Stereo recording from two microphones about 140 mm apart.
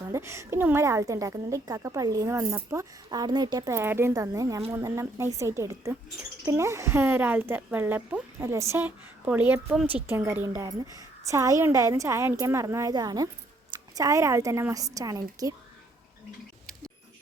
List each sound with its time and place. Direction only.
0.0 s a woman's voice: 20° right (ahead or behind)